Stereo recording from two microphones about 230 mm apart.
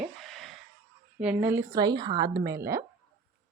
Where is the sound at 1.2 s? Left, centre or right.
Centre.